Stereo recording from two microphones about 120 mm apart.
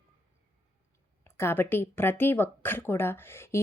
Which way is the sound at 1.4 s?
20° left (ahead or behind).